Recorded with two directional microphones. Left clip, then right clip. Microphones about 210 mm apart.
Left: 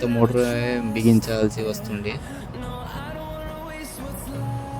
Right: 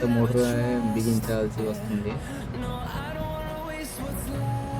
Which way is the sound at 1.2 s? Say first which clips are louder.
Left 4 dB; 45° left (ahead or behind).